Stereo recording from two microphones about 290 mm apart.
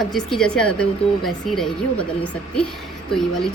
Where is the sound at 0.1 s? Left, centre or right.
Centre.